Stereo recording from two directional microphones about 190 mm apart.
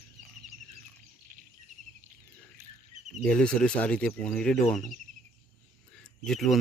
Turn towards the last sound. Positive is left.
turn(degrees=0)  # may be behind; listen again after turning